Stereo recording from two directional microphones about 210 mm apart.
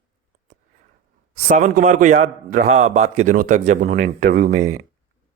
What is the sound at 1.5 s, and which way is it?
Speech, 35° right (ahead or behind).